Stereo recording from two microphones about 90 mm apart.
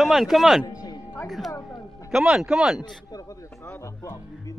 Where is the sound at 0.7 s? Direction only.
45° left (ahead or behind).